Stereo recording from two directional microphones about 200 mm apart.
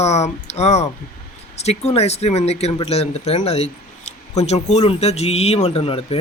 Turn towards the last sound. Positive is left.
turn(degrees=30)  # may be behind; listen again after turning